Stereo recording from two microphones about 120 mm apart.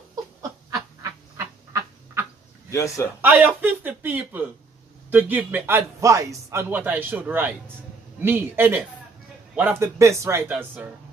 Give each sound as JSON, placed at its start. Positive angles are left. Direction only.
{"t": 0.1, "sound": "a sound", "side_deg": -30}
{"t": 1.3, "sound": "frog", "side_deg": -25}
{"t": 2.7, "sound": "a man's voice", "side_deg": 25}
{"t": 3.2, "sound": "a man's voice", "side_deg": -15}